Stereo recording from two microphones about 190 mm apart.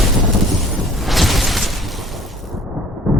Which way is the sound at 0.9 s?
Centre (ahead or behind).